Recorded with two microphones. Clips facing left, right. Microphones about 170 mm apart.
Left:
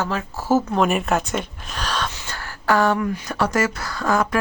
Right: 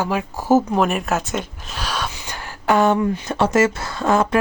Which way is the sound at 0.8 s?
Centre (ahead or behind).